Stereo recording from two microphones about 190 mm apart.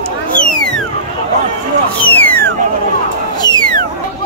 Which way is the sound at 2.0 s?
10° left (ahead or behind).